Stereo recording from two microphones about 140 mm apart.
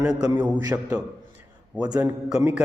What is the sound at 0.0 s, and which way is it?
Speech, 5° right (ahead or behind).